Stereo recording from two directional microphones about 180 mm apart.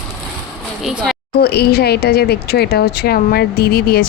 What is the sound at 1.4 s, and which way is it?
Speech, 65° left (ahead or behind).